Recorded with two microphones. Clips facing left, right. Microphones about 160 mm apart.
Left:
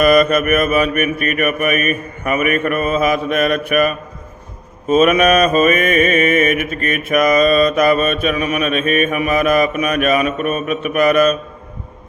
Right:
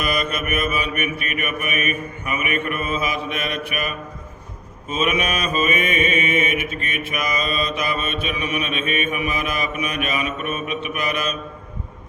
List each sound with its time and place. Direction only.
0.0 s mantra: 50° left (ahead or behind)